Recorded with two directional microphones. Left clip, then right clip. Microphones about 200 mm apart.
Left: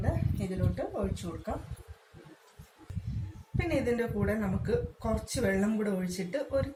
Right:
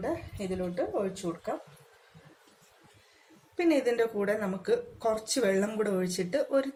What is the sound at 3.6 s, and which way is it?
Speech, 55° right (ahead or behind).